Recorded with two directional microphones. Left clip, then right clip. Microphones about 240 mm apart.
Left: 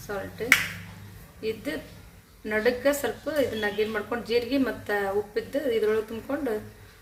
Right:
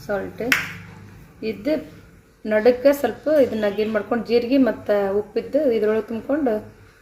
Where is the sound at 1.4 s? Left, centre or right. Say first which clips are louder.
Right 8 dB; right.